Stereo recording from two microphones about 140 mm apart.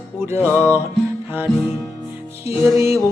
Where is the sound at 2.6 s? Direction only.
20° right (ahead or behind).